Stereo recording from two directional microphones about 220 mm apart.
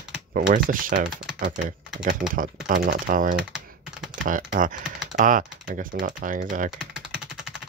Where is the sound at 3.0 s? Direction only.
40° right (ahead or behind).